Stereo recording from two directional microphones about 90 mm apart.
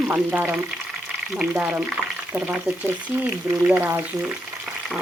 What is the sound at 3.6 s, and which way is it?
Speech, 20° right (ahead or behind).